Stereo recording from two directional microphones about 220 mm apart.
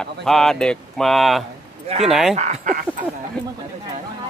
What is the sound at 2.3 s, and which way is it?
Speech, 30° right (ahead or behind).